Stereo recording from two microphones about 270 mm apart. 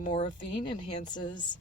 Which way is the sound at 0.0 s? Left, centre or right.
Centre.